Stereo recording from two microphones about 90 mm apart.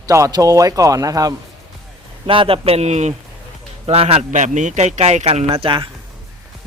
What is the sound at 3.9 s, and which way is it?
Speech, 90° right.